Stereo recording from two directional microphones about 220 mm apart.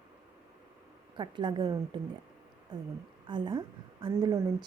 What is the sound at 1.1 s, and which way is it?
A woman's voice, 20° right (ahead or behind).